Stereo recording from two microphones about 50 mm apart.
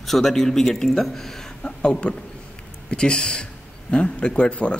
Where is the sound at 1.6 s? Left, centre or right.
Left.